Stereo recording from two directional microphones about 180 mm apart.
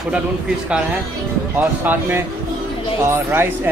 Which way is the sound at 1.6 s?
10° right (ahead or behind).